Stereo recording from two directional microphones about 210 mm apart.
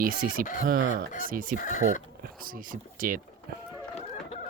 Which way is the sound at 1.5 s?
35° left (ahead or behind).